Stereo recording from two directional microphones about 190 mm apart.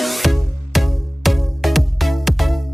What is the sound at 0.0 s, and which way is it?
Music, centre (ahead or behind).